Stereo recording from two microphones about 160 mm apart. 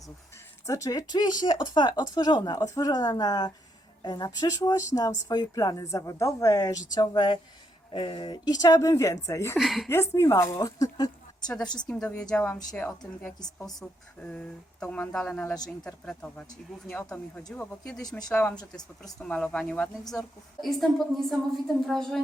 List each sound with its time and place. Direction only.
0.7 s speech: 20° left (ahead or behind)
9.6 s a woman's voice: centre (ahead or behind)
9.9 s speech: 15° left (ahead or behind)
11.4 s a woman's voice: 5° left (ahead or behind)
18.5 s speech: 25° left (ahead or behind)
19.2 s a woman's voice: 5° left (ahead or behind)